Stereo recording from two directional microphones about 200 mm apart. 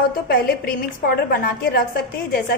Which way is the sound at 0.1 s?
50° left (ahead or behind).